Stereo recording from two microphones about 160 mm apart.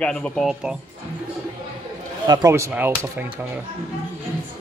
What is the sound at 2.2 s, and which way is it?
Speech, 25° right (ahead or behind).